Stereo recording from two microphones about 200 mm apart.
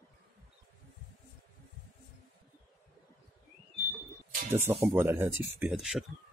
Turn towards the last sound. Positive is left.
turn(degrees=0)  # may be behind; listen again after turning